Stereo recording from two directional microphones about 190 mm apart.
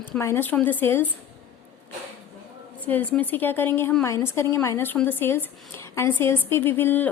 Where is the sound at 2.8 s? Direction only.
10° left (ahead or behind).